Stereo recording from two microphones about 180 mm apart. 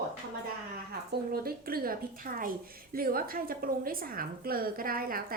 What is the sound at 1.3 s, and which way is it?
A woman's voice, 55° right (ahead or behind).